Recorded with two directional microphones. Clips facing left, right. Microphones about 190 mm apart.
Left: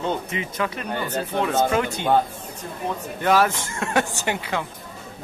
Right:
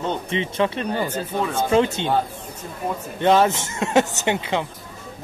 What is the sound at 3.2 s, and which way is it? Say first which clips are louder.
Speech: right 3 dB; 25° right (ahead or behind).